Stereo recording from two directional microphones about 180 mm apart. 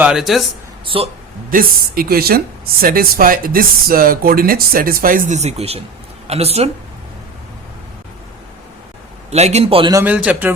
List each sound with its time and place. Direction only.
0.0 s speech: 5° right (ahead or behind)
0.9 s a man's voice: 30° right (ahead or behind)
1.5 s speech: 50° right (ahead or behind); by 6.7 s 35° right (ahead or behind)
9.3 s a man's voice: 35° right (ahead or behind)
9.9 s a man's voice: 10° right (ahead or behind)